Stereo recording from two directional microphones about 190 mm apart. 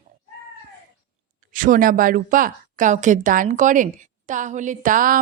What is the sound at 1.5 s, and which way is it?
A woman's voice, 45° right (ahead or behind).